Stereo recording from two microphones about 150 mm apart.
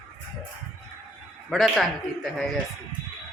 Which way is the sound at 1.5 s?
Centre (ahead or behind).